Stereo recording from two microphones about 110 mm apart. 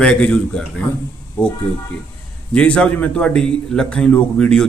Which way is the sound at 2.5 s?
10° left (ahead or behind).